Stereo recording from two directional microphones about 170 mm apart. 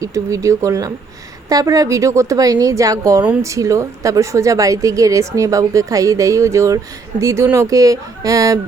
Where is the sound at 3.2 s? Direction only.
10° right (ahead or behind).